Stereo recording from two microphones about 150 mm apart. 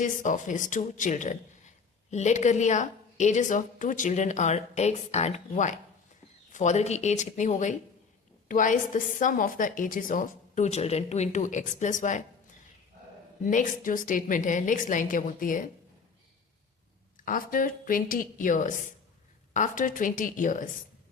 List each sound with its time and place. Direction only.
0.0 s a woman's voice: 60° left (ahead or behind)
13.4 s a woman's voice: 60° left (ahead or behind)
17.2 s a woman's voice: 65° left (ahead or behind)